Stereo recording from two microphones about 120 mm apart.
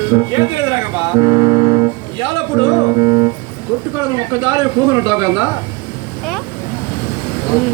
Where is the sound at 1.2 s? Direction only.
30° right (ahead or behind).